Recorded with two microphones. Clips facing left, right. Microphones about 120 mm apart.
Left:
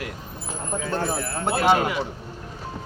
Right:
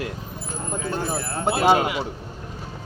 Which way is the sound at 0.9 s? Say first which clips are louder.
Left 2 dB; 15° right (ahead or behind).